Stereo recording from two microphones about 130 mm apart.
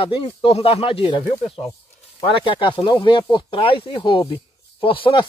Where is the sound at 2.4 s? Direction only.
40° left (ahead or behind).